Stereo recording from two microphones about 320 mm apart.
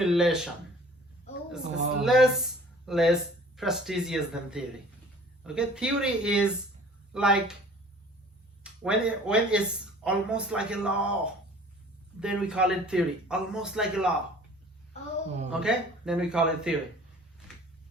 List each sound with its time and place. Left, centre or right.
0.0 s speech: centre
1.6 s speech: right
2.0 s speech: centre
8.6 s speech: centre
12.2 s speech: centre
15.6 s speech: centre